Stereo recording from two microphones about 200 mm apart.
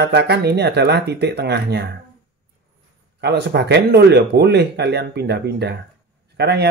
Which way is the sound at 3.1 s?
55° right (ahead or behind).